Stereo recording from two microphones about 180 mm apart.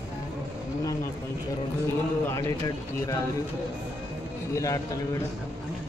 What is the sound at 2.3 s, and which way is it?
Speech, 15° left (ahead or behind).